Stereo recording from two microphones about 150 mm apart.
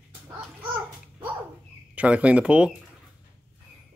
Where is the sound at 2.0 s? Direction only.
10° right (ahead or behind).